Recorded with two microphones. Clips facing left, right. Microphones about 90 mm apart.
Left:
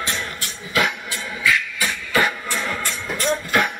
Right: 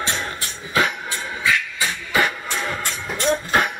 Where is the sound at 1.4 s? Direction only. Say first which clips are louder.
Left 1 dB; 20° right (ahead or behind).